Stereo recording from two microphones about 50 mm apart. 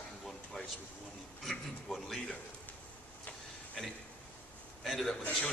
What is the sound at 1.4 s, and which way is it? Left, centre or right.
Speech, centre.